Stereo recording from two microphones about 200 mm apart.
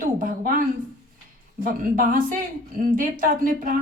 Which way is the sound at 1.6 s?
45° right (ahead or behind).